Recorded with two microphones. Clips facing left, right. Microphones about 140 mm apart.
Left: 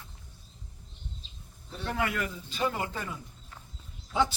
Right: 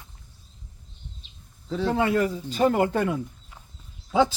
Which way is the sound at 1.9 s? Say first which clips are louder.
Right 8 dB; 30° right (ahead or behind).